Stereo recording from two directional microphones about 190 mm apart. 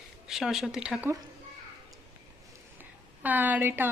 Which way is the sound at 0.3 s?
Centre (ahead or behind).